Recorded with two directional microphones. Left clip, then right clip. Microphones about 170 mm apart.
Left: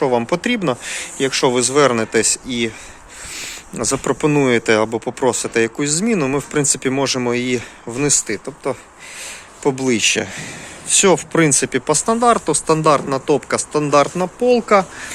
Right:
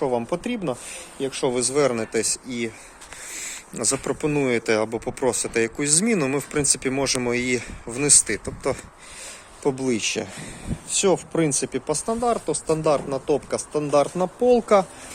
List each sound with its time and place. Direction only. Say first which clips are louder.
0.0 s speech: left 7 dB; 5° right (ahead or behind)
3.8 s speech: left 6 dB; 5° right (ahead or behind)
6.5 s speech: left 5 dB; centre (ahead or behind)
8.4 s speech: left 3 dB; 20° right (ahead or behind); by 14.1 s 5° right (ahead or behind)
14.2 s speech: left 3 dB; 25° right (ahead or behind)